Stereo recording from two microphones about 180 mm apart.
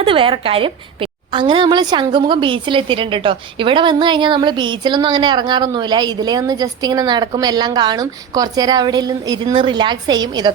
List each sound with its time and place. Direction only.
0.0 s a woman's voice: 30° right (ahead or behind)